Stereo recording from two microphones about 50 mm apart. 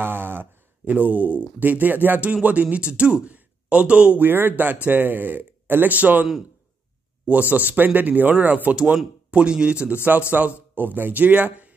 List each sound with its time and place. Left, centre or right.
0.0 s speech: right
4.2 s speech: right
7.2 s speech: right
10.4 s speech: right